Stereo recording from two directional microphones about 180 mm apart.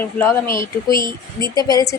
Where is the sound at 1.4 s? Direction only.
20° left (ahead or behind).